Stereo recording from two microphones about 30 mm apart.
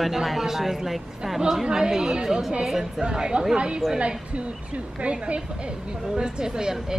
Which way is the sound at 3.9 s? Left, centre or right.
Right.